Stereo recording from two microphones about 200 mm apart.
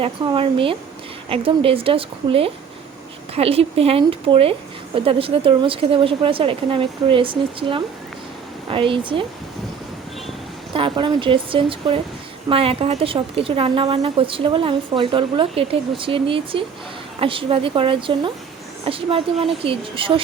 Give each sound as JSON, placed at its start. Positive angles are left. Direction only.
{"t": 0.0, "sound": "speech", "side_deg": -25}
{"t": 10.8, "sound": "speech", "side_deg": -25}